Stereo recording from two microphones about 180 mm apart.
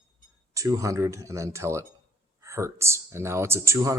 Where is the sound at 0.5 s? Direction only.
20° right (ahead or behind).